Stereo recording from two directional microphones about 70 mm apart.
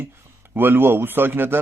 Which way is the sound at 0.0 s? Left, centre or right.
Right.